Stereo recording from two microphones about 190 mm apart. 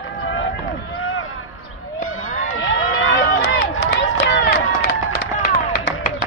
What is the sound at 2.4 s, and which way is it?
Run, 90° left.